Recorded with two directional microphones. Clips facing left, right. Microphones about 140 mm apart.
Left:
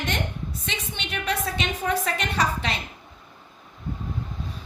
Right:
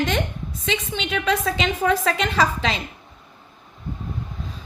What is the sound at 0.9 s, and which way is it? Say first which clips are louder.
A woman's voice: right 5 dB; 90° right.